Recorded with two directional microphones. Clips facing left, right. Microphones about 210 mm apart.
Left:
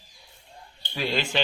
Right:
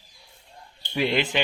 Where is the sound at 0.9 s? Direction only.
20° right (ahead or behind).